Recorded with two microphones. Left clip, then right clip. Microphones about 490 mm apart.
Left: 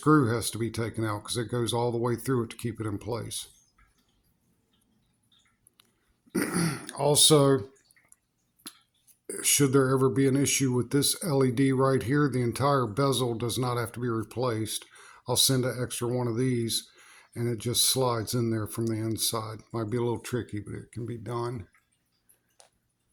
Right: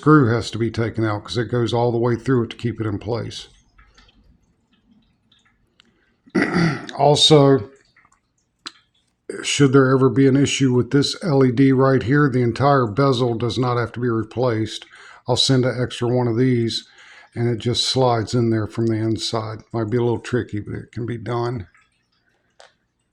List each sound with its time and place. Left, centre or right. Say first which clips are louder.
0.0 s speech: right 8 dB; left
6.3 s speech: right 10 dB; left
8.7 s a sound: right 12 dB; left
9.2 s speech: right 8 dB; left
22.6 s drip: right 12 dB; left